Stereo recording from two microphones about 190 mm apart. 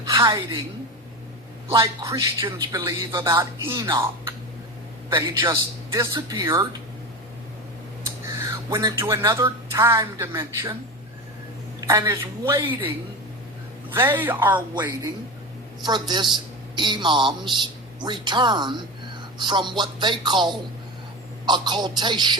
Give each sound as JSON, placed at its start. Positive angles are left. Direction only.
{"t": 0.1, "sound": "a woman's voice", "side_deg": -20}
{"t": 1.8, "sound": "speech", "side_deg": -15}
{"t": 8.0, "sound": "speech", "side_deg": -15}
{"t": 11.8, "sound": "speech", "side_deg": -15}
{"t": 13.9, "sound": "speech", "side_deg": -10}
{"t": 14.8, "sound": "speech", "side_deg": -20}